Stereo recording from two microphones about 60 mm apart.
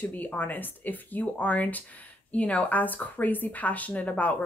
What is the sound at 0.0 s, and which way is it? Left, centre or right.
Speech, left.